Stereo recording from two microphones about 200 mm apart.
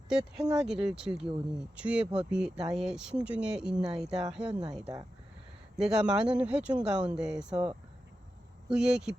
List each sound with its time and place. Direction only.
0.1 s speech: 5° right (ahead or behind)
7.5 s speech: 25° right (ahead or behind)
8.7 s speech: 5° right (ahead or behind)